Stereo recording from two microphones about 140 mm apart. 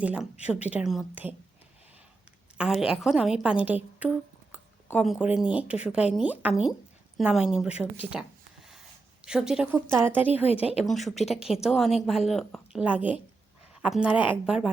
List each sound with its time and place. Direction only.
0.0 s a woman's voice: 10° right (ahead or behind)
2.6 s a woman's voice: 5° right (ahead or behind)
4.9 s a woman's voice: 5° right (ahead or behind)
9.7 s a woman's voice: 15° right (ahead or behind)
10.4 s speech: 45° left (ahead or behind)
10.8 s a woman's voice: centre (ahead or behind)
11.1 s speech: 50° left (ahead or behind)
11.6 s a woman's voice: centre (ahead or behind)
12.8 s a woman's voice: 10° right (ahead or behind)